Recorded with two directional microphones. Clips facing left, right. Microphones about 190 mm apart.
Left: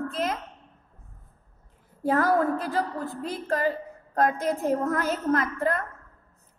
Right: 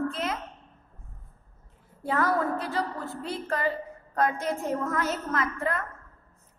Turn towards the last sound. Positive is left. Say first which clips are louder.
# left 5 dB
turn(degrees=40)  # may be behind; listen again after turning